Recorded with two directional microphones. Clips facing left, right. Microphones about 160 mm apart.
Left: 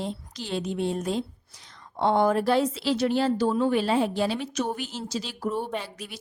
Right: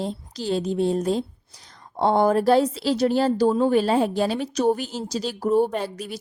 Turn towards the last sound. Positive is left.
turn(degrees=-40)  # may be behind; listen again after turning